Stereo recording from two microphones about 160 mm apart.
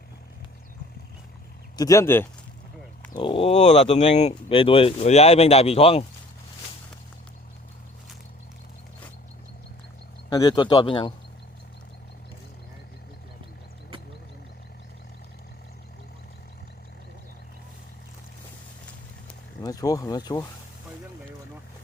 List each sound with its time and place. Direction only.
1.7 s speech: 20° left (ahead or behind)
3.2 s speech: 35° left (ahead or behind)
10.2 s speech: 25° left (ahead or behind)
19.6 s speech: 20° left (ahead or behind)